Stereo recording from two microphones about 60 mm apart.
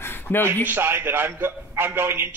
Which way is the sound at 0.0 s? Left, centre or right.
Left.